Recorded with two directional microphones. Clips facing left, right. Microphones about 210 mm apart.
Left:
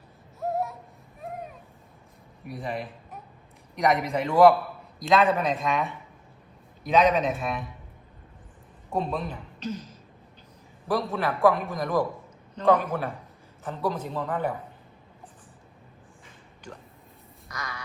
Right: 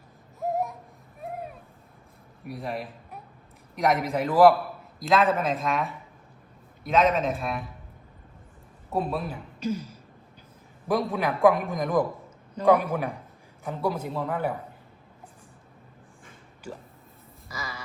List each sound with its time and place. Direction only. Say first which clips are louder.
0.3 s a sound: right 1 dB; 15° right (ahead or behind)
2.4 s a man's voice: even; centre (ahead or behind)
8.9 s a man's voice: right 1 dB; 5° right (ahead or behind)
16.7 s a man's voice: right 4 dB; 5° right (ahead or behind)
17.5 s crow: even; centre (ahead or behind)